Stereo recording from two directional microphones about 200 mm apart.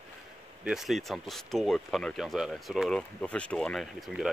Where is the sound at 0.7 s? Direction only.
Centre (ahead or behind).